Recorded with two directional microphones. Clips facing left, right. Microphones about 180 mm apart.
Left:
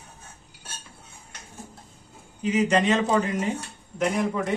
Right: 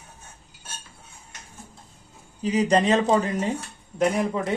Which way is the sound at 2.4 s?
35° right (ahead or behind).